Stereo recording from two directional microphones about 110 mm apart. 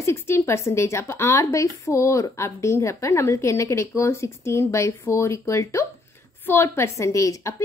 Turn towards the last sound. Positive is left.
turn(degrees=30)  # may be behind; listen again after turning